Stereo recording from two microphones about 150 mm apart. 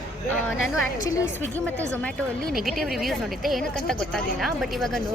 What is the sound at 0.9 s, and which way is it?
Speech, 20° left (ahead or behind).